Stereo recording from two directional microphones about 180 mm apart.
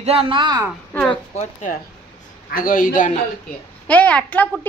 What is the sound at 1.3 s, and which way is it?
A woman's voice, 40° left (ahead or behind).